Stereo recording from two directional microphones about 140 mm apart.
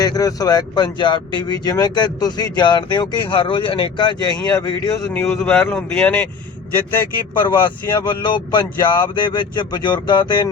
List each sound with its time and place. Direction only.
0.0 s speech: 25° left (ahead or behind)
5.0 s a man's voice: 10° left (ahead or behind)
7.3 s speech: 35° left (ahead or behind)